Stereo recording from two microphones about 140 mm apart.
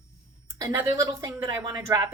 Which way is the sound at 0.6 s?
25° right (ahead or behind).